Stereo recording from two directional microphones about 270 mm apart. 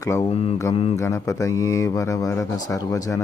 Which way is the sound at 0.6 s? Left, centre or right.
Centre.